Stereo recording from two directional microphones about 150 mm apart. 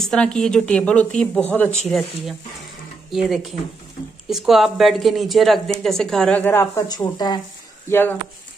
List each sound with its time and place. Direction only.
0.0 s a woman's voice: 5° left (ahead or behind); by 7.3 s 25° left (ahead or behind)
7.9 s a woman's voice: 15° left (ahead or behind)